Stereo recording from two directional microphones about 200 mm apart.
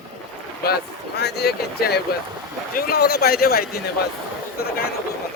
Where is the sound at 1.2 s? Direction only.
55° left (ahead or behind).